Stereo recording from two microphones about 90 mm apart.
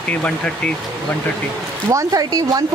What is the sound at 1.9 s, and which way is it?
Speech, 40° right (ahead or behind).